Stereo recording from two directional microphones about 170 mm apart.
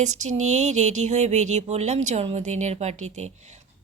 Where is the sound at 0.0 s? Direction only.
45° right (ahead or behind).